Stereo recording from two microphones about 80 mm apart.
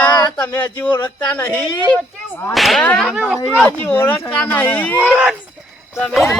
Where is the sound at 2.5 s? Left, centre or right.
Centre.